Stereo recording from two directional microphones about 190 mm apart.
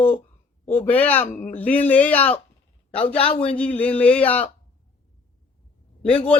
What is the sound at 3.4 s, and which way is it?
Speech, 5° left (ahead or behind).